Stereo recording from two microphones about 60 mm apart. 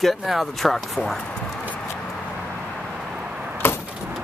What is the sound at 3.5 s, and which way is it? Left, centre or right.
Vehicle, left.